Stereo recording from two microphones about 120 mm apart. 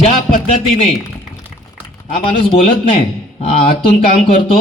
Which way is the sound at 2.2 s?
50° left (ahead or behind).